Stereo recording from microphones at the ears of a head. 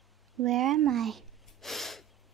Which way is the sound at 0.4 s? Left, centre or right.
Right.